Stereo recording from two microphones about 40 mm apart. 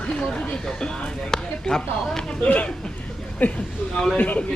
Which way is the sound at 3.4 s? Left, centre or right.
Left.